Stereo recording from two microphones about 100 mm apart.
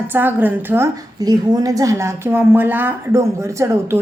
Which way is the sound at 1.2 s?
40° right (ahead or behind).